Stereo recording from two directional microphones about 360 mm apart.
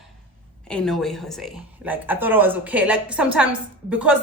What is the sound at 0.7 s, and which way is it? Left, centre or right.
Speech, centre.